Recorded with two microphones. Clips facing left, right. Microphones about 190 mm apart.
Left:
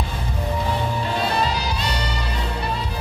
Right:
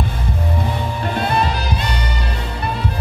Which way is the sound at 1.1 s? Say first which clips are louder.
Right 4 dB; 55° right (ahead or behind).